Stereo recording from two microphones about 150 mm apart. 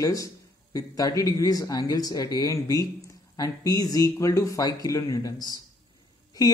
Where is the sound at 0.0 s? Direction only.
25° left (ahead or behind).